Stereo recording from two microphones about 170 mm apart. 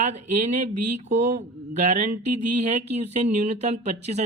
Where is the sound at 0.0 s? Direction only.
40° right (ahead or behind).